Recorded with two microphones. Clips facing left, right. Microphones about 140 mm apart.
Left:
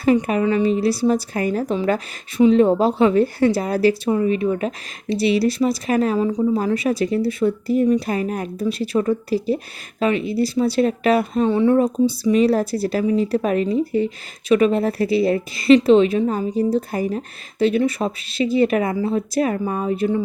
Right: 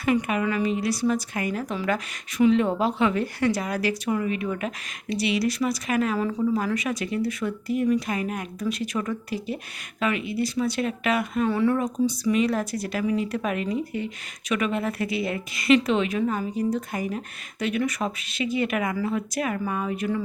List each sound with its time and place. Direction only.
0.0 s speech: 35° left (ahead or behind)
6.1 s speech: 20° left (ahead or behind)
6.4 s speech: 30° left (ahead or behind)